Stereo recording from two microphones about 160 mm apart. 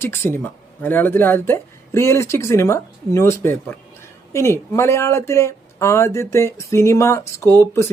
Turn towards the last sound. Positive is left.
turn(degrees=15)  # may be behind; listen again after turning